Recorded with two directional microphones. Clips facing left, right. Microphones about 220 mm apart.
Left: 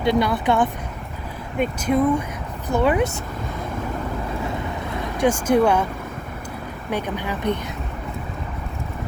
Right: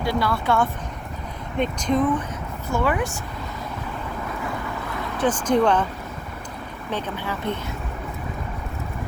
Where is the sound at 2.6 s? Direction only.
20° left (ahead or behind).